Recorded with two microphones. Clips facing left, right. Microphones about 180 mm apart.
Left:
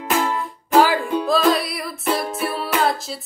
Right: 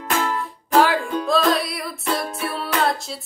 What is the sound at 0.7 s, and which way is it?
Music, centre (ahead or behind).